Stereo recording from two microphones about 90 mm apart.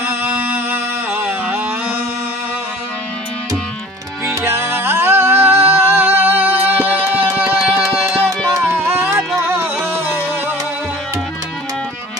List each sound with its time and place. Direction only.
0.0 s music: 25° right (ahead or behind)
4.4 s music: 30° right (ahead or behind)
8.5 s music: 30° right (ahead or behind)